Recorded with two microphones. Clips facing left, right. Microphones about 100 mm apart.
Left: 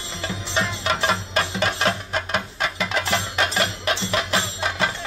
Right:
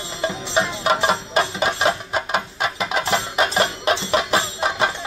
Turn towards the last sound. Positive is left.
turn(degrees=-20)  # may be behind; listen again after turning